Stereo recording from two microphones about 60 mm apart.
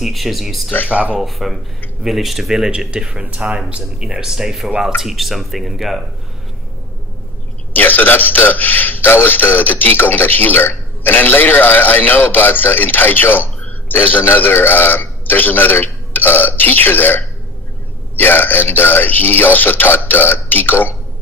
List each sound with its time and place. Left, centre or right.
0.0 s speech: centre
0.8 s speech: right
1.2 s speech: centre
7.7 s a man's voice: left